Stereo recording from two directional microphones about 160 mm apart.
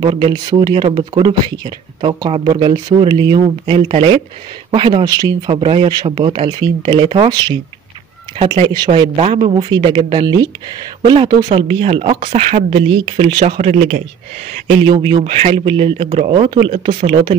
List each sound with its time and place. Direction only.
0.0 s speech: 25° right (ahead or behind)
11.6 s speech: 35° right (ahead or behind)
13.7 s a man's voice: 45° right (ahead or behind)